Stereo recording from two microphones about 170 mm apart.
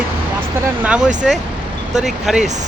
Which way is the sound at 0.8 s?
5° right (ahead or behind).